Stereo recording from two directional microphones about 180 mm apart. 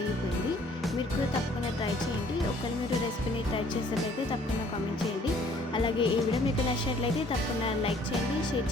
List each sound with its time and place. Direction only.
5.7 s music: 30° left (ahead or behind)